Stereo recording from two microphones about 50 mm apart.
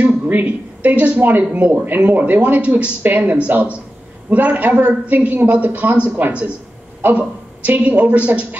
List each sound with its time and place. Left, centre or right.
0.0 s a man's voice: right